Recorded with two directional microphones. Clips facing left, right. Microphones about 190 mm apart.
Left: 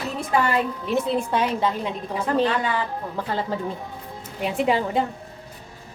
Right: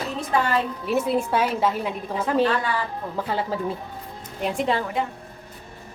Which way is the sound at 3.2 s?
5° right (ahead or behind).